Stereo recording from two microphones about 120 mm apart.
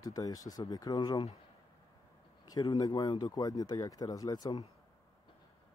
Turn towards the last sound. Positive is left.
turn(degrees=35)  # may be behind; listen again after turning